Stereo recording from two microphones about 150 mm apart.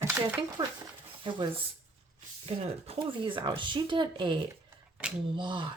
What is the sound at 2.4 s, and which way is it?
Speech, 40° right (ahead or behind).